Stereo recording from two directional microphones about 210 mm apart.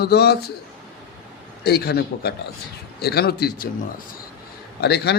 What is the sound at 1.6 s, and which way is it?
Speech, 50° left (ahead or behind).